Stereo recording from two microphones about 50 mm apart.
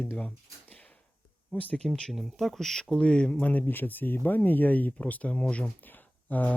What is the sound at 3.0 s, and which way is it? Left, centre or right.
Speech, left.